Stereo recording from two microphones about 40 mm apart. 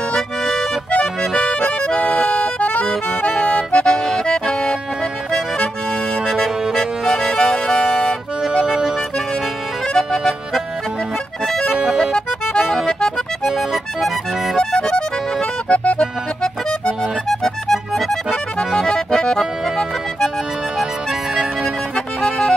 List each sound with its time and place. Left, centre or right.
0.1 s accordion: centre
0.9 s accordion: left
3.2 s accordion: left
6.2 s accordion: centre
7.3 s music: centre
8.6 s music: centre
9.9 s music: centre
11.7 s music: centre
12.0 s accordion: centre
14.6 s accordion: centre
15.7 s music: left
16.8 s music: centre
18.6 s accordion: left
21.9 s accordion: centre